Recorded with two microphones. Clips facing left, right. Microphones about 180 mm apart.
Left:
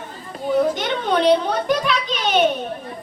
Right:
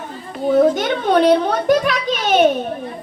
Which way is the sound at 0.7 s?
50° right (ahead or behind).